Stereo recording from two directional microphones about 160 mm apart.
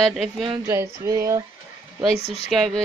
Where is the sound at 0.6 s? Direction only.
20° right (ahead or behind).